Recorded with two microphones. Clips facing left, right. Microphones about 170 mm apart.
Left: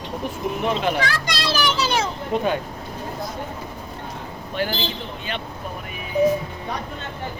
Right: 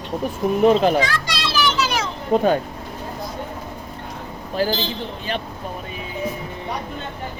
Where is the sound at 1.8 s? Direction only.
30° left (ahead or behind).